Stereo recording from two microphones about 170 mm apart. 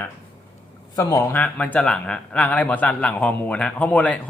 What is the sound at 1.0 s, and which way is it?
Speech, 20° left (ahead or behind).